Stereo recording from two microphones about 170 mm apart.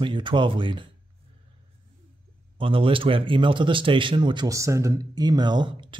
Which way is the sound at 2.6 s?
30° right (ahead or behind).